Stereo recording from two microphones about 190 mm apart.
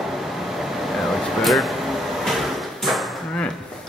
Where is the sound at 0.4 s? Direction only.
Centre (ahead or behind).